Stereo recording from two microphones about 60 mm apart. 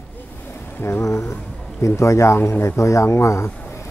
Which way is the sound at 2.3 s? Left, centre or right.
Left.